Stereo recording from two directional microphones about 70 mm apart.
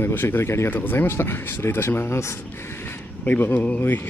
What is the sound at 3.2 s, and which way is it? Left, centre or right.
Speech, left.